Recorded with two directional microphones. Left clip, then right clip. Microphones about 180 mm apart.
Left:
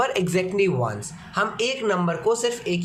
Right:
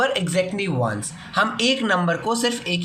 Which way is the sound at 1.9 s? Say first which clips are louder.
Right 1 dB; 20° left (ahead or behind).